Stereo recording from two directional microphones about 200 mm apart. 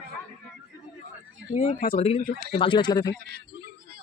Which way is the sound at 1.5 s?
35° left (ahead or behind).